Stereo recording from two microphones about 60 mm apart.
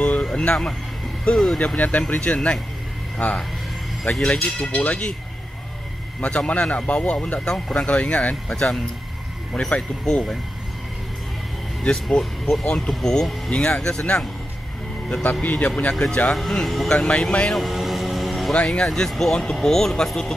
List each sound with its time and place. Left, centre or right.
0.0 s a sound: left
0.3 s speech: centre
1.8 s speech: left
6.2 s speech: left
7.4 s speech: centre
7.8 s speech: left
11.8 s speech: centre
15.4 s speech: left
15.9 s speech: centre
17.5 s music: centre
18.5 s speech: centre
18.9 s speech: centre